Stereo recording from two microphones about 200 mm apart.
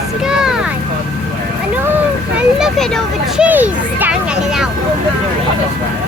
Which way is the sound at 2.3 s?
Centre (ahead or behind).